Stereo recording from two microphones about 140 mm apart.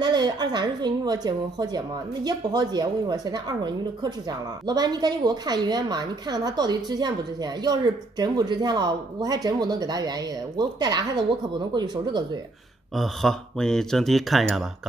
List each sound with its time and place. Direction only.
0.0 s a woman's voice: 30° right (ahead or behind)
12.9 s speech: centre (ahead or behind)